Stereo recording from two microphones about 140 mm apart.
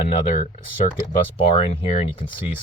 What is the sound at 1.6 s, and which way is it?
Speech, 45° left (ahead or behind).